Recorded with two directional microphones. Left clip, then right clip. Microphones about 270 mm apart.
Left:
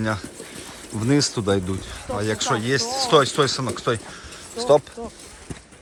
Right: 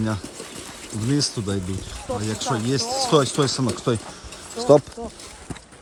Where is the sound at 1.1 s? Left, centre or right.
Centre.